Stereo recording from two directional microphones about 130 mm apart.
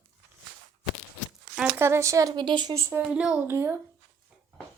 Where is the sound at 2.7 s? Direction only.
20° right (ahead or behind).